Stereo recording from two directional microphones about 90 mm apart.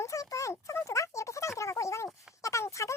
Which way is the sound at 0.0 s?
35° left (ahead or behind).